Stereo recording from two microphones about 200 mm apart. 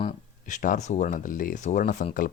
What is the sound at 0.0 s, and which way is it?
Speech, 40° left (ahead or behind).